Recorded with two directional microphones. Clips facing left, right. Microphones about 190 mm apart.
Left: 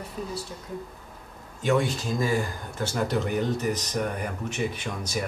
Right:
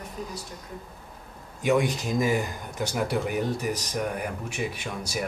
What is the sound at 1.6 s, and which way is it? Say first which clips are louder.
Speech: right 1 dB; 15° right (ahead or behind).